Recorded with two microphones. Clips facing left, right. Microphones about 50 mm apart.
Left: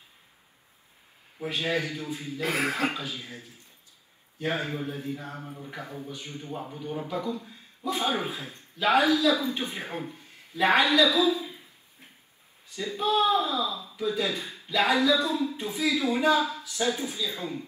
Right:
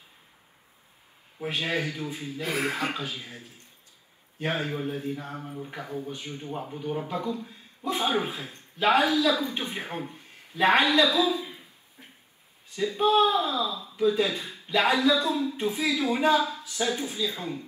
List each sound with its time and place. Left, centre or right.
1.5 s a man's voice: right
2.4 s speech: left
2.9 s a man's voice: right
4.4 s a man's voice: right
11.0 s a sound: right
12.7 s speech: right
14.5 s a sound: right
15.5 s a man's voice: right